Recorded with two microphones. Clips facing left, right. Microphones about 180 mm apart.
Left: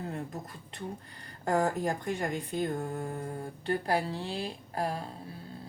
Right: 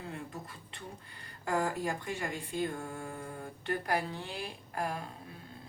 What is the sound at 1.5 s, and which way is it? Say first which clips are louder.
Speech: left 4 dB; 40° left (ahead or behind).